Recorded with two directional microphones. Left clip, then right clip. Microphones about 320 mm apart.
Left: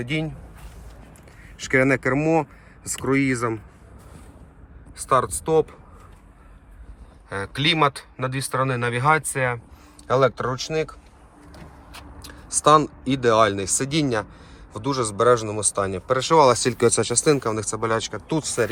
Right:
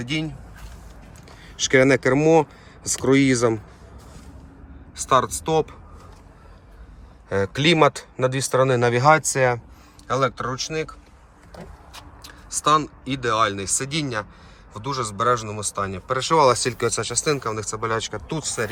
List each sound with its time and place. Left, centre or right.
0.0 s speech: centre
1.6 s speech: centre
4.9 s speech: centre
8.1 s speech: centre
10.1 s speech: centre
12.2 s speech: centre